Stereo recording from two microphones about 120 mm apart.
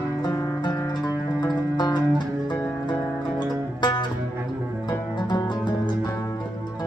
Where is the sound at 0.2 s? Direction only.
30° left (ahead or behind).